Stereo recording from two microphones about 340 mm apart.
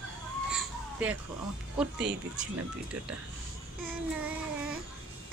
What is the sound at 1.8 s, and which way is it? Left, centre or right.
Speech, centre.